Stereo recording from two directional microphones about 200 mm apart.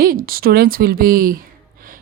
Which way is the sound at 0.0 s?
45° right (ahead or behind).